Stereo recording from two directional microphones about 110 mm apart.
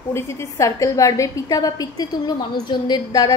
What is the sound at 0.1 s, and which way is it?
A woman's voice, 25° left (ahead or behind).